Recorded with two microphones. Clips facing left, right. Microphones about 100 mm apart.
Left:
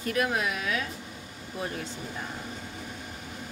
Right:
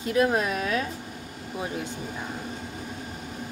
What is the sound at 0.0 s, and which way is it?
Speech, 25° right (ahead or behind).